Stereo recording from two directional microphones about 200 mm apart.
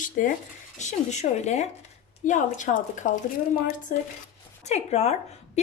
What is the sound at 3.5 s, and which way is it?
Speech, 50° left (ahead or behind).